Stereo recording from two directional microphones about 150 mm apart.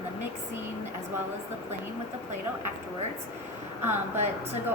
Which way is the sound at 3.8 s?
15° right (ahead or behind).